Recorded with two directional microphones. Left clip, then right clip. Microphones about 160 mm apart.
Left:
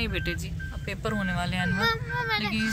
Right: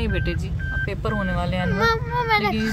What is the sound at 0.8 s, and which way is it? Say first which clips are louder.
Speech: right 4 dB; 5° right (ahead or behind).